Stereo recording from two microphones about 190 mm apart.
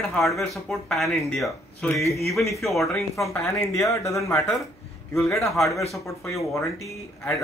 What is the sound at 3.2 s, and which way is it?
Speech, 15° left (ahead or behind).